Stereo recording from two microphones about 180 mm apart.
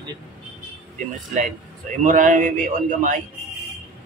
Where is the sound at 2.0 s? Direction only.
45° right (ahead or behind).